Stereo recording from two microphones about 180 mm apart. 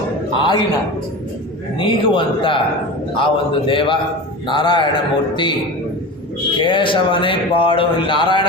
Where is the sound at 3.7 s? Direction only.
30° left (ahead or behind).